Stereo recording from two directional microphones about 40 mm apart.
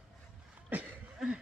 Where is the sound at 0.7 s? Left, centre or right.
Right.